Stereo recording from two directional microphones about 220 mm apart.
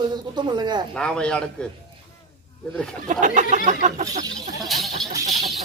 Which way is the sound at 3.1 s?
35° right (ahead or behind).